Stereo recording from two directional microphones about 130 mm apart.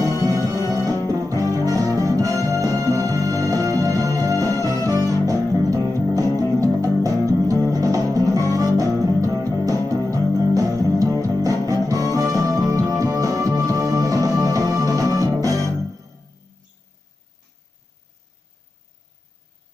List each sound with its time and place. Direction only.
0.2 s music: 25° right (ahead or behind)
0.9 s music: 20° left (ahead or behind)
1.3 s music: 25° right (ahead or behind)